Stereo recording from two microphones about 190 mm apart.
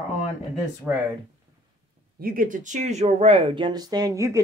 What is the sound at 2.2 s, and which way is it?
Speech, 45° right (ahead or behind).